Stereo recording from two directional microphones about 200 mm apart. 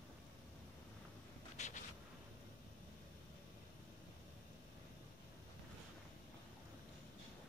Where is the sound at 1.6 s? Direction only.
35° left (ahead or behind).